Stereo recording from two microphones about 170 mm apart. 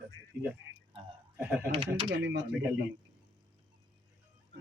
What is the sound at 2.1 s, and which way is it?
Speech, 90° right.